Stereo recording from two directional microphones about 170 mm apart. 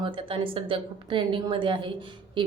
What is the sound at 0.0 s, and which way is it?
A woman's voice, 30° right (ahead or behind).